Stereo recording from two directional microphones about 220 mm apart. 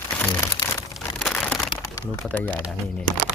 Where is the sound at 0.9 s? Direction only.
Centre (ahead or behind).